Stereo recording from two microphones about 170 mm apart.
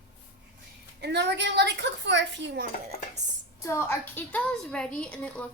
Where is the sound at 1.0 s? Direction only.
90° right.